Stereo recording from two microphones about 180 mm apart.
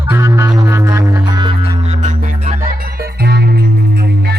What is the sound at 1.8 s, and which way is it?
Music, 40° right (ahead or behind).